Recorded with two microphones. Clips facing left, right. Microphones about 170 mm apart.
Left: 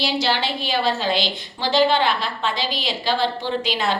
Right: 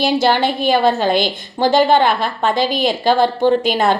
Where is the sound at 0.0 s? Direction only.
50° right (ahead or behind).